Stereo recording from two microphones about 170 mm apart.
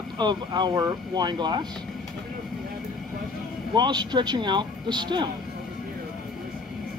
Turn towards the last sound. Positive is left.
turn(degrees=-25)  # may be behind; listen again after turning